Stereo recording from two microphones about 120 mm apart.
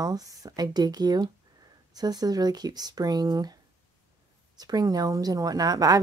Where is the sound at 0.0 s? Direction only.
30° right (ahead or behind).